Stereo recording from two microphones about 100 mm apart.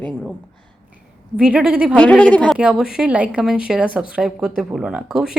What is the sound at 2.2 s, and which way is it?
Speech, 10° left (ahead or behind).